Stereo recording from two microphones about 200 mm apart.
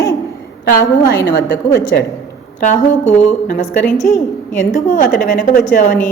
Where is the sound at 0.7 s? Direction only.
65° left (ahead or behind).